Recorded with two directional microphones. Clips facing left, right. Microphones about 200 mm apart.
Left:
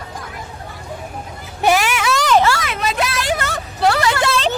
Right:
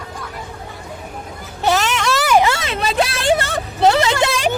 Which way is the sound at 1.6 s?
10° left (ahead or behind).